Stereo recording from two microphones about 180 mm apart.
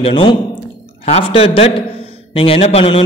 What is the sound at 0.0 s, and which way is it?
A man's voice, 25° left (ahead or behind).